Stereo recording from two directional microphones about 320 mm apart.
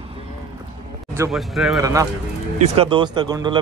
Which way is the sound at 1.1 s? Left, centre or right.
Centre.